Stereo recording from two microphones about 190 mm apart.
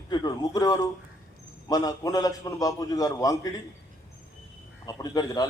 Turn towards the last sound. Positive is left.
turn(degrees=20)  # may be behind; listen again after turning